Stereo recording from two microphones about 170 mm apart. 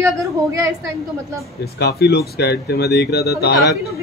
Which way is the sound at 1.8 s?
70° left (ahead or behind).